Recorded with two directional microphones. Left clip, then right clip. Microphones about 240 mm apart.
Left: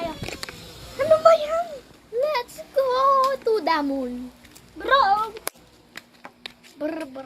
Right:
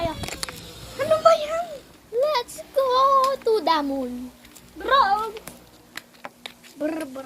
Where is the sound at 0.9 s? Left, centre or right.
Left.